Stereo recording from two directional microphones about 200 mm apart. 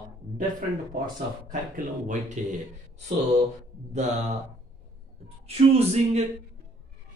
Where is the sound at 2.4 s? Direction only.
35° right (ahead or behind).